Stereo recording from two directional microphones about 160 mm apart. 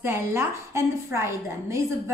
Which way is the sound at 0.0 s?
15° right (ahead or behind).